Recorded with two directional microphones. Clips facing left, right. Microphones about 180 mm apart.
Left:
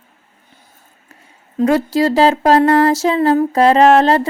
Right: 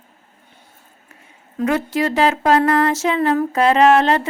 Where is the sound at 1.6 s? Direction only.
35° left (ahead or behind).